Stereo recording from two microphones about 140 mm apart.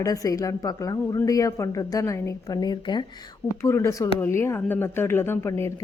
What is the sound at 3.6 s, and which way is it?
Speech, 20° left (ahead or behind).